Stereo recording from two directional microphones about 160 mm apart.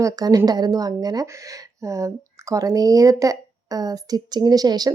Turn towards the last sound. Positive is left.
turn(degrees=-25)  # may be behind; listen again after turning